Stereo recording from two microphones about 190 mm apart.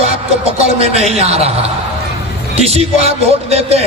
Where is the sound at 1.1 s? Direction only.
35° right (ahead or behind).